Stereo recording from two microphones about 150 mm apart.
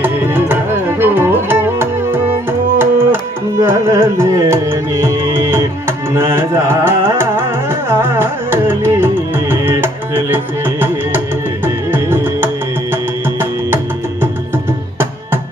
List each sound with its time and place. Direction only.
0.0 s music: 15° right (ahead or behind)
6.1 s carnatic music: 15° right (ahead or behind)
11.6 s music: 15° right (ahead or behind)